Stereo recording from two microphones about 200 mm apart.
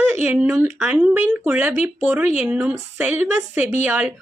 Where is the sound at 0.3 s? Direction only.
5° right (ahead or behind).